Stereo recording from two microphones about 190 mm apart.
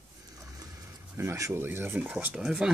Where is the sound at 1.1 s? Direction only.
15° right (ahead or behind).